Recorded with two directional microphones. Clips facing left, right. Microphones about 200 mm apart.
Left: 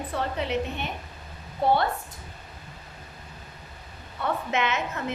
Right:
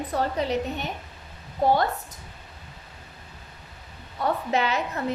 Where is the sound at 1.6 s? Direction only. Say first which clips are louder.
Right 1 dB; 45° right (ahead or behind).